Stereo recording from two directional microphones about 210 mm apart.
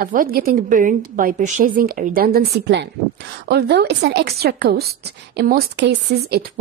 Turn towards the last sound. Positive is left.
turn(degrees=-50)  # may be behind; listen again after turning